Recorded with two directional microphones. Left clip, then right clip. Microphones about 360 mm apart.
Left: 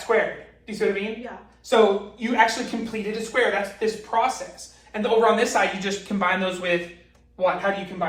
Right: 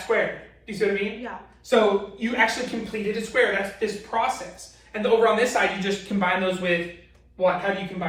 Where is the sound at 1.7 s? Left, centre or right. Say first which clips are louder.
Left 1 dB; centre.